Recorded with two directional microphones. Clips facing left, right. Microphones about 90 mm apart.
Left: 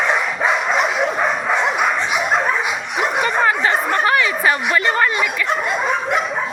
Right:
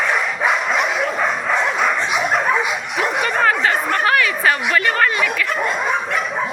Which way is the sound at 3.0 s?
15° left (ahead or behind).